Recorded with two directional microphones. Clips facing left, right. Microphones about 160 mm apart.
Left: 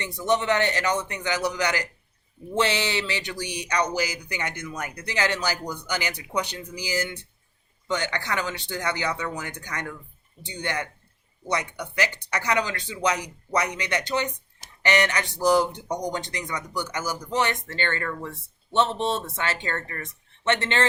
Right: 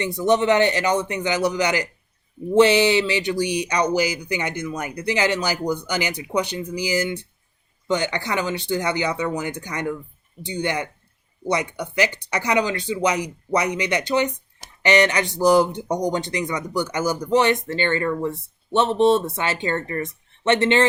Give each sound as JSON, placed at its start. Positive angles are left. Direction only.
{"t": 0.0, "sound": "speech", "side_deg": -15}